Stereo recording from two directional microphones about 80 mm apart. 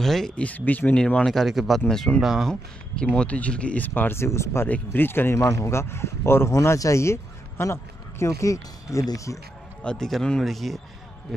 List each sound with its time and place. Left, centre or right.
0.0 s speech: centre
0.4 s speech: centre
2.2 s speech: centre
3.2 s speech: centre; by 4.6 s left
4.6 s speech: left
5.4 s speech: left
9.8 s speech: centre